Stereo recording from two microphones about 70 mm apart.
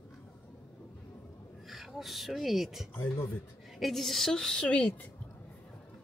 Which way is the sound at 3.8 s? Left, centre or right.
Centre.